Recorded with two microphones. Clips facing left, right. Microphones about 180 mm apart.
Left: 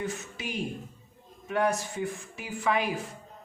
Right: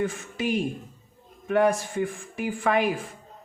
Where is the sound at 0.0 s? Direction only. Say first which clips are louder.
Right 7 dB; 50° right (ahead or behind).